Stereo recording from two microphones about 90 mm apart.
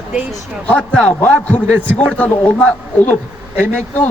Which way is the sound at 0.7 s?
15° left (ahead or behind).